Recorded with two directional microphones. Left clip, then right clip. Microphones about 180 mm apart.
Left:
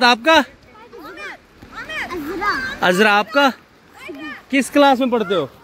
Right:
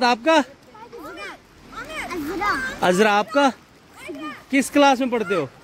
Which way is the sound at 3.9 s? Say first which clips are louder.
Left 2 dB; 55° right (ahead or behind).